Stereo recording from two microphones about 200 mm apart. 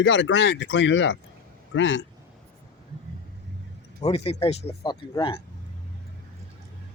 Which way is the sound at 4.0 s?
30° left (ahead or behind).